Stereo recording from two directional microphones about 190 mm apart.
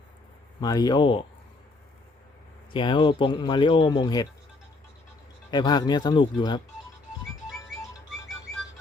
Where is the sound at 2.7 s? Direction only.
25° left (ahead or behind).